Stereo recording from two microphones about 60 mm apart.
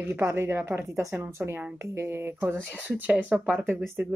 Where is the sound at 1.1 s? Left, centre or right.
Right.